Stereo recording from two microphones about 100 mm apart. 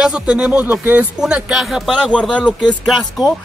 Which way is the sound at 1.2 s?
5° right (ahead or behind).